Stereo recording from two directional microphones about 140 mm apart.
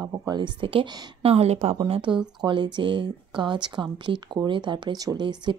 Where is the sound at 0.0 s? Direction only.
25° right (ahead or behind).